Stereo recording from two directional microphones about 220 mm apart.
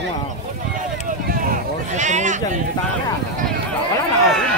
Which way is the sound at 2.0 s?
30° right (ahead or behind).